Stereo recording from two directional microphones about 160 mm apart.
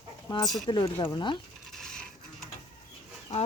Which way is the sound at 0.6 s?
25° left (ahead or behind).